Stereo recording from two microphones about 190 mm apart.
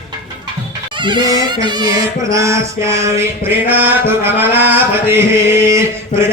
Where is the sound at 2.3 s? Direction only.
15° right (ahead or behind).